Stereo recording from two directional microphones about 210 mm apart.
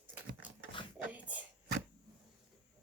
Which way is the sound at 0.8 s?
25° left (ahead or behind).